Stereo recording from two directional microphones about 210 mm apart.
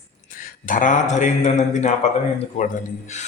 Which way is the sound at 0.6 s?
40° left (ahead or behind).